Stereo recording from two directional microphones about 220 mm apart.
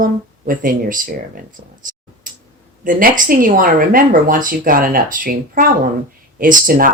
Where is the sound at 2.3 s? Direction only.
35° right (ahead or behind).